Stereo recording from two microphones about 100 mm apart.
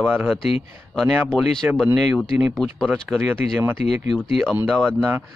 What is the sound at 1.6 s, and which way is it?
Speech, 15° right (ahead or behind).